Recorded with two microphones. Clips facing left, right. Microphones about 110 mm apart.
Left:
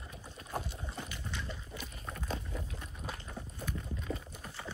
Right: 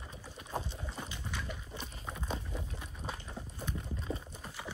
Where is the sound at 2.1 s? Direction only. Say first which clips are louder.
Even; 10° right (ahead or behind).